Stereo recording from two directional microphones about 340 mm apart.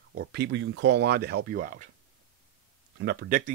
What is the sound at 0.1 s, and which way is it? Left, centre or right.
Speech, right.